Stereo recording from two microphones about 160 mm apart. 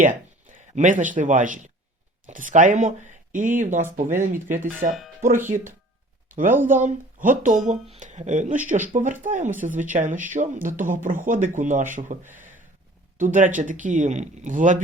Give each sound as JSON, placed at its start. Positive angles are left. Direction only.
{"t": 0.5, "sound": "a man's voice", "side_deg": -55}
{"t": 4.9, "sound": "speech", "side_deg": 0}
{"t": 5.5, "sound": "speech", "side_deg": -55}
{"t": 13.1, "sound": "speech", "side_deg": -55}